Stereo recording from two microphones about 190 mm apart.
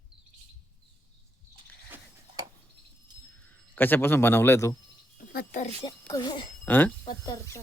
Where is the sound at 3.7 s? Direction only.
10° left (ahead or behind).